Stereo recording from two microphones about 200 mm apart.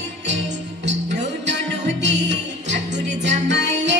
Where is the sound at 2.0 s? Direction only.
60° right (ahead or behind).